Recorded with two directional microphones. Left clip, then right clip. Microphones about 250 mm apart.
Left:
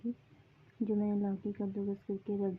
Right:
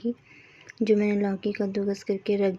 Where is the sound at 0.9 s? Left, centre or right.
Centre.